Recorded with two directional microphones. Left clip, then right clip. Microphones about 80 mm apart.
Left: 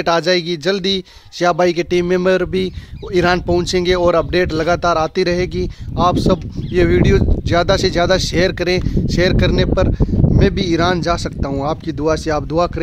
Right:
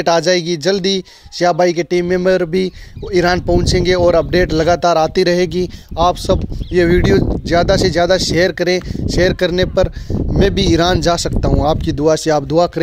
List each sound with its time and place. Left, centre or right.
0.0 s speech: centre
2.2 s speech: centre
10.4 s speech: right